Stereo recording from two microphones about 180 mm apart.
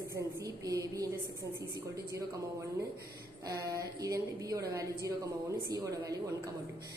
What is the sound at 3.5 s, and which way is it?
A woman's voice, 20° right (ahead or behind).